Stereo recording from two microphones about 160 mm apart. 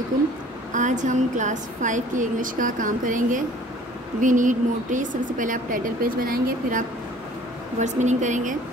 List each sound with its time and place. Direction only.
0.7 s a woman's voice: 50° right (ahead or behind)
7.8 s a woman's voice: 50° right (ahead or behind)